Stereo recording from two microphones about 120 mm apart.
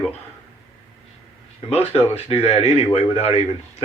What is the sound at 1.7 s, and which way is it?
A man's voice, 55° left (ahead or behind).